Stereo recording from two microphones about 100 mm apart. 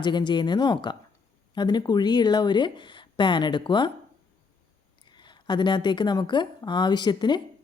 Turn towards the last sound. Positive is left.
turn(degrees=45)  # may be behind; listen again after turning